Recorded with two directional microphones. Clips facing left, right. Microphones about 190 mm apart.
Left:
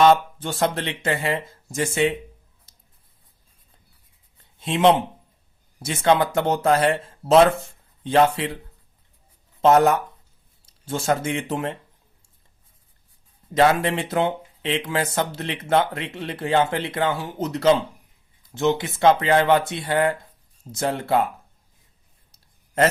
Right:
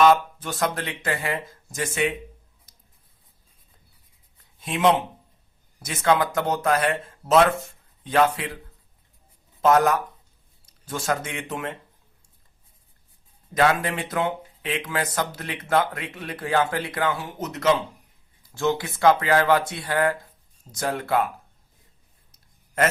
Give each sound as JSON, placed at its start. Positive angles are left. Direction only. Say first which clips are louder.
{"t": 0.0, "sound": "speech", "louder": "left 1 dB", "side_deg": 30}
{"t": 2.7, "sound": "writing", "louder": "right 1 dB", "side_deg": 30}
{"t": 4.6, "sound": "speech", "louder": "left 3 dB", "side_deg": 30}
{"t": 9.6, "sound": "speech", "louder": "left 3 dB", "side_deg": 25}
{"t": 13.5, "sound": "speech", "louder": "left 3 dB", "side_deg": 25}